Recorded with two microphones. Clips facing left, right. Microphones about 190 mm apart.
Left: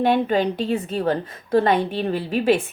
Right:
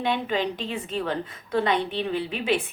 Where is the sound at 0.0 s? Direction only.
45° left (ahead or behind).